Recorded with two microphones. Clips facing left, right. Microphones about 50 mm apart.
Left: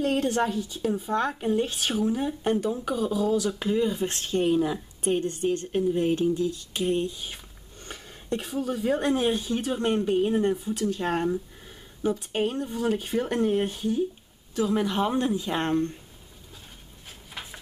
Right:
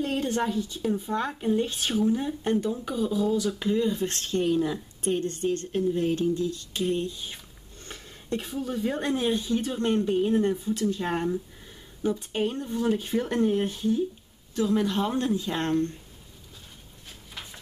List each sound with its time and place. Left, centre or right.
0.0 s a woman's voice: centre; by 7.3 s left
7.8 s a sound: centre
8.4 s a woman's voice: centre
9.0 s speech: centre
10.5 s speech: centre
12.0 s speech: centre